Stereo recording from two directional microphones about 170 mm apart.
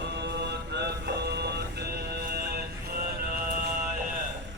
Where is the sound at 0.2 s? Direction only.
85° right; by 2.6 s 65° right (ahead or behind).